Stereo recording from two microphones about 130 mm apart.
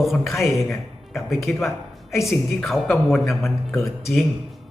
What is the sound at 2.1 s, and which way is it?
Speech, 20° left (ahead or behind).